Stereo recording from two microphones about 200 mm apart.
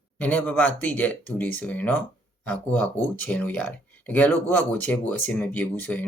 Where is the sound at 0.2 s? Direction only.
10° left (ahead or behind).